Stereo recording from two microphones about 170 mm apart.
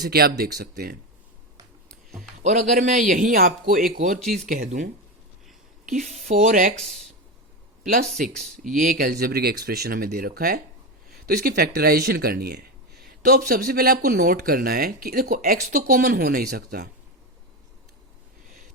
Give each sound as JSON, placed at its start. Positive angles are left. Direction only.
{"t": 0.0, "sound": "speech", "side_deg": -65}
{"t": 1.9, "sound": "a sound", "side_deg": 0}
{"t": 2.4, "sound": "speech", "side_deg": -45}
{"t": 4.4, "sound": "speech", "side_deg": -45}
{"t": 5.9, "sound": "speech", "side_deg": -55}
{"t": 8.3, "sound": "speech", "side_deg": 5}
{"t": 8.6, "sound": "speech", "side_deg": -55}